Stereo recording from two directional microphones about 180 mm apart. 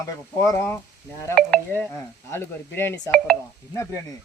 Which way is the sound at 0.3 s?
15° left (ahead or behind).